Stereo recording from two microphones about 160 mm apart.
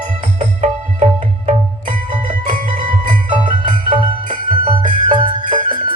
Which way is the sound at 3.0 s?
50° right (ahead or behind).